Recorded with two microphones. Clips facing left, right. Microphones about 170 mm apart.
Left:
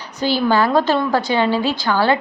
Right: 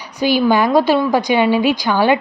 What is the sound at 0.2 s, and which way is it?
A woman's voice, 10° right (ahead or behind).